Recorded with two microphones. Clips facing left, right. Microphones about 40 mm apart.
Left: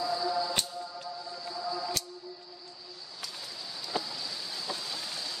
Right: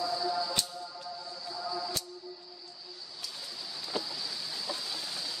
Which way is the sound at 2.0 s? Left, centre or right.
Left.